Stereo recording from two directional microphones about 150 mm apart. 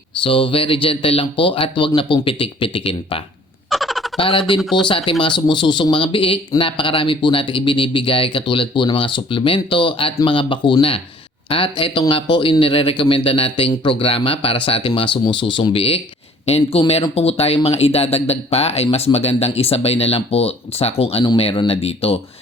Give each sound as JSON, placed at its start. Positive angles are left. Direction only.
{"t": 0.2, "sound": "speech", "side_deg": 35}
{"t": 3.7, "sound": "a sound", "side_deg": 0}
{"t": 4.2, "sound": "speech", "side_deg": 35}
{"t": 4.6, "sound": "speech", "side_deg": 0}
{"t": 4.9, "sound": "speech", "side_deg": 35}